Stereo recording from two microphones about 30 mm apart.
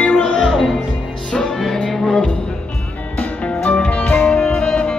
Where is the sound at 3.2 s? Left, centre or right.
Left.